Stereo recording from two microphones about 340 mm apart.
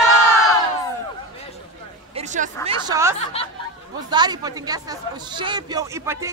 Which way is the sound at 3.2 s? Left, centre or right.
Centre.